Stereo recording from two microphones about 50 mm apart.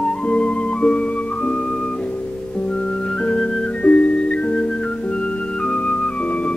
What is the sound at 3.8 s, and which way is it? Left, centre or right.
Music, left.